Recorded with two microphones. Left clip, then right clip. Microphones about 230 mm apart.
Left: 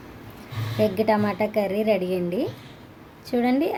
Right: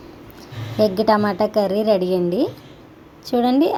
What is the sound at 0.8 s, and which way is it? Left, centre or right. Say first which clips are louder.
Speech: right 5 dB; right.